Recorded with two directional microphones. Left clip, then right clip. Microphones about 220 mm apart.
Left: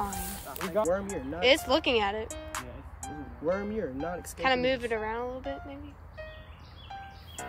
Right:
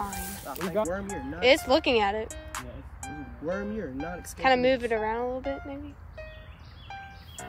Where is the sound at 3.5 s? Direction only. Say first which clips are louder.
Left 2 dB; 30° left (ahead or behind).